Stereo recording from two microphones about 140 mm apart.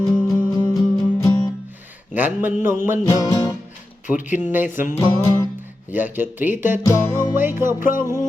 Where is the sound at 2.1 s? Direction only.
15° right (ahead or behind).